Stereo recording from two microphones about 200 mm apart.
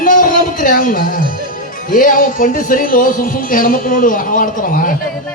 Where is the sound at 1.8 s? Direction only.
45° left (ahead or behind).